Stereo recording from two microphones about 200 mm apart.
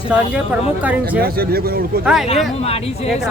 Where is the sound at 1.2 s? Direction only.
50° right (ahead or behind).